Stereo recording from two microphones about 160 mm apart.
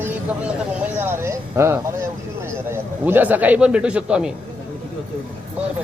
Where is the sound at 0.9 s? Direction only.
15° right (ahead or behind).